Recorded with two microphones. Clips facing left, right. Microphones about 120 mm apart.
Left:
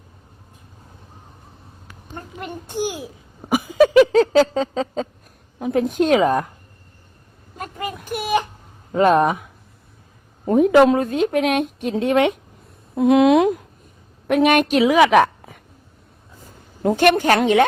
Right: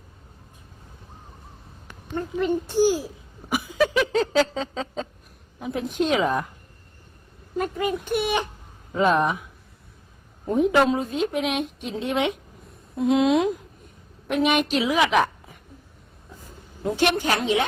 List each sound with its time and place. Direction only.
2.8 s a woman's voice: 60° left (ahead or behind)
3.5 s a sound: 50° left (ahead or behind)
7.6 s a sound: 45° left (ahead or behind)
8.9 s a woman's voice: 60° left (ahead or behind)
10.4 s a woman's voice: 60° left (ahead or behind)
13.0 s a woman's voice: 65° left (ahead or behind)
16.8 s a woman's voice: 55° left (ahead or behind)